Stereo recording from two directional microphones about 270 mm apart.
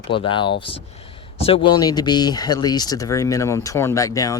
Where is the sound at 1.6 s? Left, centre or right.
Centre.